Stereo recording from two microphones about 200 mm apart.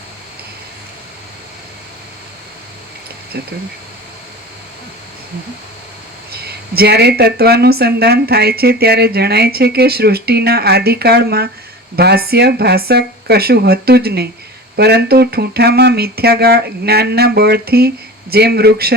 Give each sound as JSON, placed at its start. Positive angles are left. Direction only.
{"t": 3.3, "sound": "speech", "side_deg": -55}
{"t": 6.3, "sound": "speech", "side_deg": -50}